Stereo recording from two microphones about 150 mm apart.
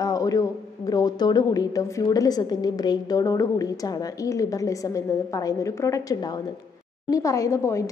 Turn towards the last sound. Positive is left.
turn(degrees=20)  # may be behind; listen again after turning